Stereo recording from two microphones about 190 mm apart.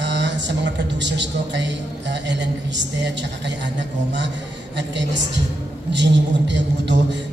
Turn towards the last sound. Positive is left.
turn(degrees=-70)  # may be behind; listen again after turning